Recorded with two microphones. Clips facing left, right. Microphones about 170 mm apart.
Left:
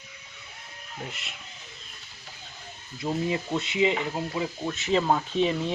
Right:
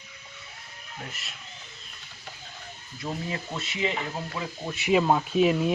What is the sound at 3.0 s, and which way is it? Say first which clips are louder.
Speech: left 5 dB; 20° left (ahead or behind).